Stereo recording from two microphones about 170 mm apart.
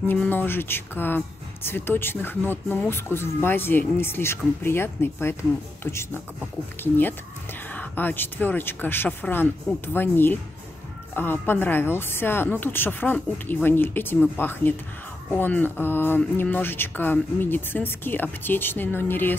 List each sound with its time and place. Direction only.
0.1 s speech: 10° left (ahead or behind)